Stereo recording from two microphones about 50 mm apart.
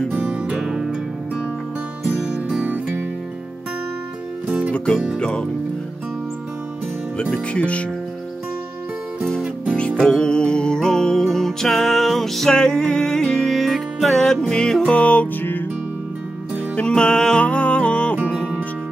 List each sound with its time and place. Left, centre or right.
0.1 s music: right
2.1 s music: right
4.7 s music: centre
5.2 s speech: centre
7.2 s music: left
10.0 s music: centre
12.5 s music: centre
16.7 s music: centre